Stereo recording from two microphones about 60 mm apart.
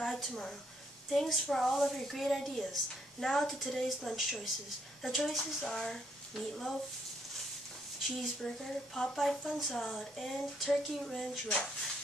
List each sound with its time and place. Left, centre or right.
0.0 s a sound: centre
0.3 s a woman's voice: centre
8.4 s a woman's voice: centre
11.4 s speech: centre